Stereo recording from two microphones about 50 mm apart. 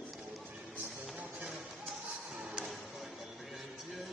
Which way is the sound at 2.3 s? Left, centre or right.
Centre.